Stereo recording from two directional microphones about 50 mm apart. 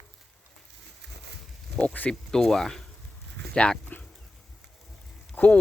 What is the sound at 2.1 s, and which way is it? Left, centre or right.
Speech, centre.